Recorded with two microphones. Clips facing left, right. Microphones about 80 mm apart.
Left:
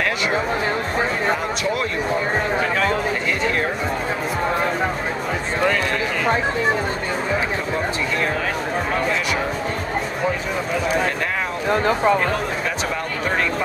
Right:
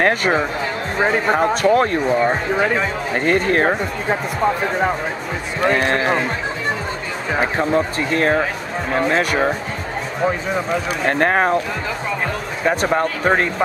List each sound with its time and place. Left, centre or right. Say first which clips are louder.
1.4 s speech: right 8 dB; right
3.3 s speech: right 5 dB; right
8.1 s speech: right 5 dB; right
11.1 s speech: right 7 dB; right
12.9 s speech: right 6 dB; right